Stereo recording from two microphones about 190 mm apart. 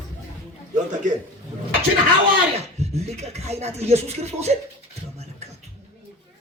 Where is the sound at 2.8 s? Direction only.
35° right (ahead or behind).